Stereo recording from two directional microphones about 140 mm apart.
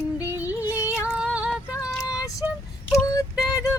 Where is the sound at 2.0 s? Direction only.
25° left (ahead or behind).